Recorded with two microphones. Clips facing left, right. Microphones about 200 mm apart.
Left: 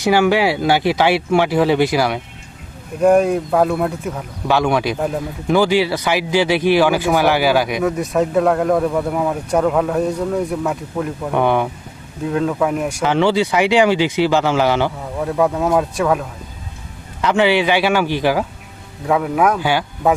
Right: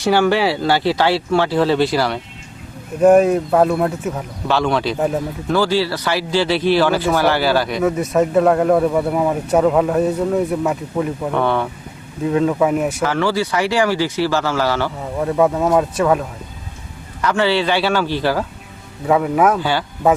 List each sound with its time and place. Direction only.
0.0 s speech: 10° left (ahead or behind)
3.0 s speech: 5° right (ahead or behind)
4.4 s speech: 10° left (ahead or behind)
4.9 s speech: 5° right (ahead or behind)
5.5 s speech: 15° left (ahead or behind)
7.9 s speech: centre (ahead or behind)
11.3 s speech: 15° left (ahead or behind)
12.2 s speech: centre (ahead or behind)
13.0 s speech: 20° left (ahead or behind)
15.0 s speech: centre (ahead or behind)
17.2 s speech: 20° left (ahead or behind)
19.0 s speech: centre (ahead or behind)
19.5 s speech: 15° left (ahead or behind)